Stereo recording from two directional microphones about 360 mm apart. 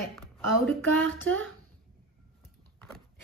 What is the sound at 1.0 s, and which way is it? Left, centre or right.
Speech, right.